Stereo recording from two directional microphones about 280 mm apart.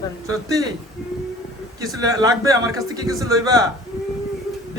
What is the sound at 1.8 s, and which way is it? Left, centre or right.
Speech, centre.